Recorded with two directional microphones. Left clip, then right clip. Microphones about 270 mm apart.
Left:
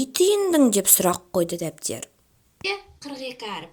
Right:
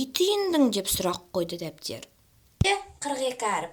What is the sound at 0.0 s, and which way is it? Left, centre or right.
A woman's voice, centre.